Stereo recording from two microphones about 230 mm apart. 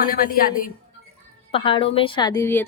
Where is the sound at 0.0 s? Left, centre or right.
Left.